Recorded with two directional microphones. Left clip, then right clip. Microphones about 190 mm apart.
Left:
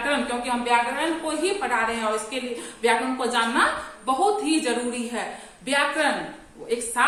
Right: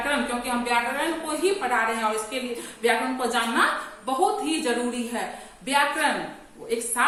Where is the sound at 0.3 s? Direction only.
15° left (ahead or behind).